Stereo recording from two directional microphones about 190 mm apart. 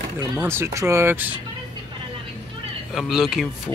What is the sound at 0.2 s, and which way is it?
Speech, 15° right (ahead or behind).